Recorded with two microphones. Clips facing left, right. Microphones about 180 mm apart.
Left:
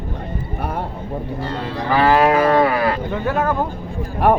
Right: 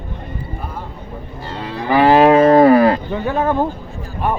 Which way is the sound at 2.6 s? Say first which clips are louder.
Right 7 dB; 40° right (ahead or behind).